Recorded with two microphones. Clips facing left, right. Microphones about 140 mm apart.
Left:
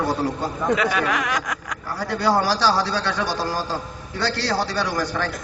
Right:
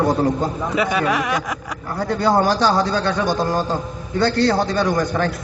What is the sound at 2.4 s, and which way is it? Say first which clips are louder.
Speech: right 3 dB; 50° right (ahead or behind).